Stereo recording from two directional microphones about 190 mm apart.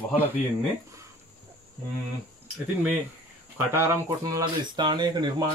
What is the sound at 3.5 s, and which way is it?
Speech, 15° right (ahead or behind).